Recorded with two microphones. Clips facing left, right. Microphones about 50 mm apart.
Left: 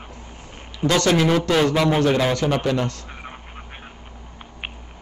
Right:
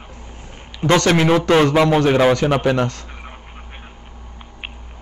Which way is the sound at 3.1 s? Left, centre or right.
Centre.